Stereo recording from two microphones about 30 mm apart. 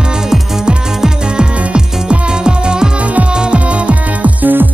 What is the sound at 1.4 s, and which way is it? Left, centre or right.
Music, right.